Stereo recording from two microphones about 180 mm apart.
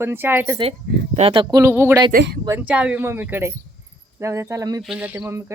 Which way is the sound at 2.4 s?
10° right (ahead or behind).